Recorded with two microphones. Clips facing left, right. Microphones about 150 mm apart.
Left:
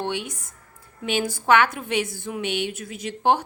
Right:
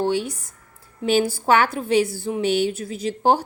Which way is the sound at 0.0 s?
35° right (ahead or behind).